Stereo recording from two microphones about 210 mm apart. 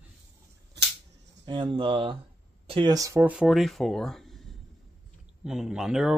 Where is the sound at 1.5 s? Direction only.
25° right (ahead or behind); by 4.4 s centre (ahead or behind).